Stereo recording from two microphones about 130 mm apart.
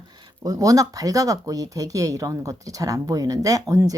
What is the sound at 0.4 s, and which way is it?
Speech, 25° right (ahead or behind).